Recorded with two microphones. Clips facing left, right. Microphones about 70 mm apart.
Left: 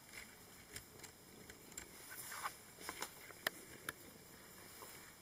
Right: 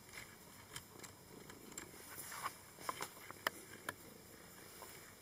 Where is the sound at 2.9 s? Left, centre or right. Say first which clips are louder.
Right 5 dB; centre.